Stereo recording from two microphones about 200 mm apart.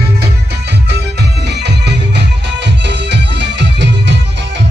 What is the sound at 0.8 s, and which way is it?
Music, 55° right (ahead or behind).